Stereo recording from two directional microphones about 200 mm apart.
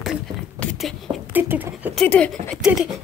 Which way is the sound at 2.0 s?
5° left (ahead or behind).